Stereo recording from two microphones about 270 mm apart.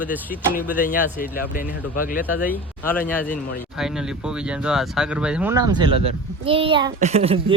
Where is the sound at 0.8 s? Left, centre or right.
Left.